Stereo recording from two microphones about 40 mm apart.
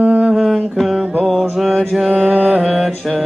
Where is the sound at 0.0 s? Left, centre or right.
Centre.